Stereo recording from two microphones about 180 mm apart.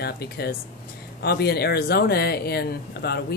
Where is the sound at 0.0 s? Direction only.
60° left (ahead or behind).